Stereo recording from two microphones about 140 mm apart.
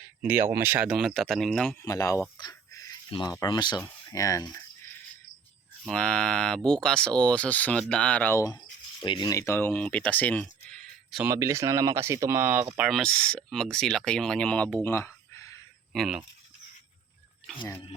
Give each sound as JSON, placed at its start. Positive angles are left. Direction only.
{"t": 0.2, "sound": "speech", "side_deg": -15}
{"t": 1.8, "sound": "speech", "side_deg": 25}
{"t": 2.4, "sound": "a sound", "side_deg": 25}
{"t": 3.4, "sound": "speech", "side_deg": 30}
{"t": 5.9, "sound": "speech", "side_deg": 5}
{"t": 9.0, "sound": "speech", "side_deg": 30}
{"t": 11.2, "sound": "speech", "side_deg": -20}
{"t": 12.8, "sound": "speech", "side_deg": 0}
{"t": 15.9, "sound": "speech", "side_deg": -5}